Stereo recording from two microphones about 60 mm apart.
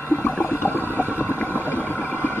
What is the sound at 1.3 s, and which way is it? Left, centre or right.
Engine, left.